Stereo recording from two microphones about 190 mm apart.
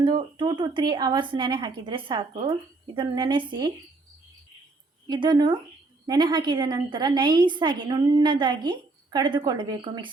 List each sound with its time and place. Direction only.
0.0 s a woman's voice: 25° right (ahead or behind)
5.0 s a woman's voice: 25° right (ahead or behind)